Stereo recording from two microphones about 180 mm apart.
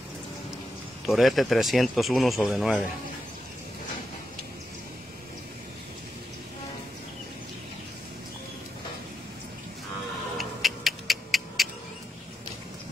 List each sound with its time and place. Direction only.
1.0 s speech: centre (ahead or behind)
10.3 s music: centre (ahead or behind)